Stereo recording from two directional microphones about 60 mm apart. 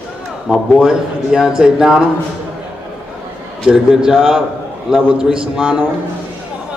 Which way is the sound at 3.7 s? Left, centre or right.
Centre.